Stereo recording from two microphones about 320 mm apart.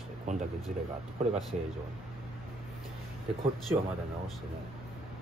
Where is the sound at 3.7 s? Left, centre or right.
Centre.